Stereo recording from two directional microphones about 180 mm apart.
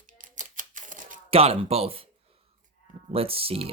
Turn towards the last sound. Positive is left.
turn(degrees=-30)  # may be behind; listen again after turning